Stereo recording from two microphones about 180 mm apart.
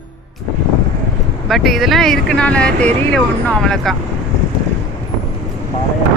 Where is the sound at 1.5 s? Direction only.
Centre (ahead or behind).